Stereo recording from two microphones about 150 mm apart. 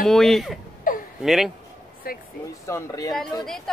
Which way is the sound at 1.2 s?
5° right (ahead or behind).